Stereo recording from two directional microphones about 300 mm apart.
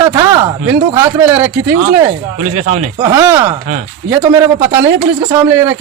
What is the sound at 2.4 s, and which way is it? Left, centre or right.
Speech, right.